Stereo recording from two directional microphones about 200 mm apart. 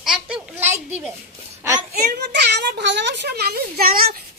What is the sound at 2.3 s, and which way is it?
A child's voice, 55° right (ahead or behind).